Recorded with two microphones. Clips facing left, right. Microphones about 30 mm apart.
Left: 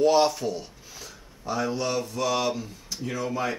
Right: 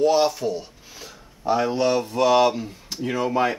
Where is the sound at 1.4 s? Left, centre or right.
Right.